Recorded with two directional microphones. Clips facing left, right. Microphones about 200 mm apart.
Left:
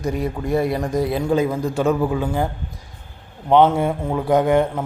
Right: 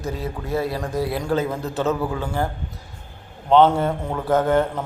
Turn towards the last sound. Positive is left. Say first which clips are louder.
# left 2 dB
turn(degrees=15)  # may be behind; listen again after turning